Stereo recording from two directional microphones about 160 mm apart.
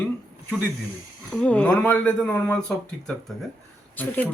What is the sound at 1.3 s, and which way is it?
A woman's voice, 5° left (ahead or behind).